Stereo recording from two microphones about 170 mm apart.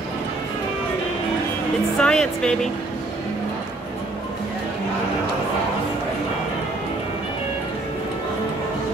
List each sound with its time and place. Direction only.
2.0 s speech: 5° left (ahead or behind)